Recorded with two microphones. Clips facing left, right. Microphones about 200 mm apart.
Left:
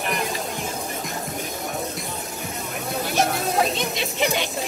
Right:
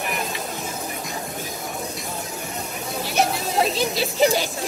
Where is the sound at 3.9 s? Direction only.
35° right (ahead or behind).